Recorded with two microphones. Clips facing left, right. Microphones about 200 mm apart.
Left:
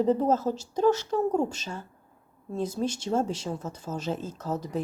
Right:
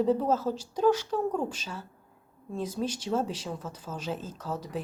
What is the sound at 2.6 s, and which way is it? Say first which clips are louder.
Speech: left 3 dB; 10° right (ahead or behind).